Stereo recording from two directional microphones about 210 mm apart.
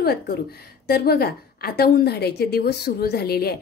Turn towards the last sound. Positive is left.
turn(degrees=50)  # may be behind; listen again after turning